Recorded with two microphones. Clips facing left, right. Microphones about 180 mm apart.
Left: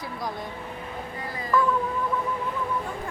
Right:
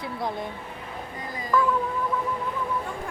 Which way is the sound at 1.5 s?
Centre (ahead or behind).